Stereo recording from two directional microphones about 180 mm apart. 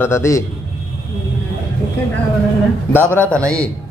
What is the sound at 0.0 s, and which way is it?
Speech, 15° left (ahead or behind).